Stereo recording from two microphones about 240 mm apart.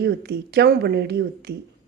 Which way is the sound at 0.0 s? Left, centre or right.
Right.